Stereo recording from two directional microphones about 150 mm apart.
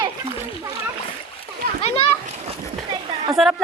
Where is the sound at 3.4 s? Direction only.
Centre (ahead or behind).